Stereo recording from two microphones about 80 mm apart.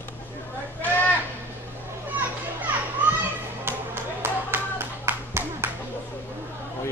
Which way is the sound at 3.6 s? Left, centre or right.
Right.